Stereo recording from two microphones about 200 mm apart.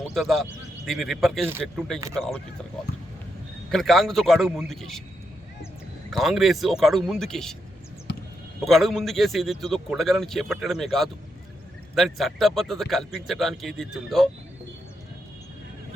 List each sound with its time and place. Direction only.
0.0 s a man's voice: centre (ahead or behind)
3.7 s a man's voice: centre (ahead or behind)
6.1 s a man's voice: centre (ahead or behind)
8.1 s basketball bounce: 60° left (ahead or behind)
8.6 s a man's voice: centre (ahead or behind)